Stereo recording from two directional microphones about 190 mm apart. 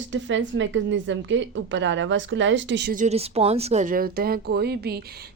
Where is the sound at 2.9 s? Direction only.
40° right (ahead or behind); by 5.3 s 55° right (ahead or behind).